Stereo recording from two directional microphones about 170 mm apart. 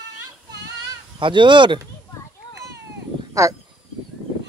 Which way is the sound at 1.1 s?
30° right (ahead or behind).